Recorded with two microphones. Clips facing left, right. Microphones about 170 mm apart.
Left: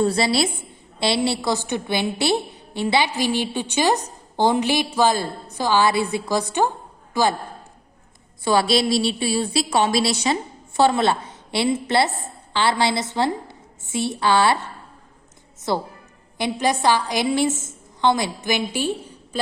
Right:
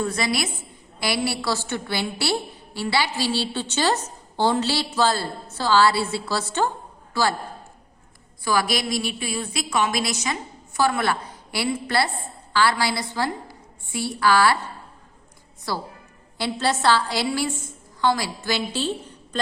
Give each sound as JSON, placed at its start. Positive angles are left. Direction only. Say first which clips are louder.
{"t": 0.0, "sound": "a woman's voice", "louder": "left 5 dB", "side_deg": 30}
{"t": 8.4, "sound": "a woman's voice", "louder": "left 5 dB", "side_deg": 25}
{"t": 15.7, "sound": "a woman's voice", "louder": "left 5 dB", "side_deg": 20}